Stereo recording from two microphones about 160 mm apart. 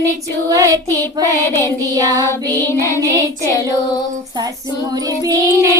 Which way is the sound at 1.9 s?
20° right (ahead or behind).